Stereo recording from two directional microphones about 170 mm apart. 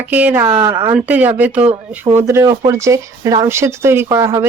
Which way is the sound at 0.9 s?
10° right (ahead or behind).